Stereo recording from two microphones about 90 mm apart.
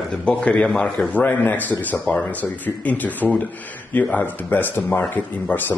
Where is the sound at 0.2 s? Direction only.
10° left (ahead or behind).